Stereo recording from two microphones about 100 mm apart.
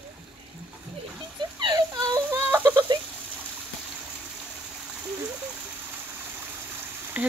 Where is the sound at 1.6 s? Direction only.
45° right (ahead or behind).